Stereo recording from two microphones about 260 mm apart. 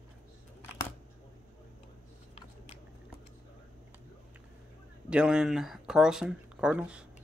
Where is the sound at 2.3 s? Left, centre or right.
Left.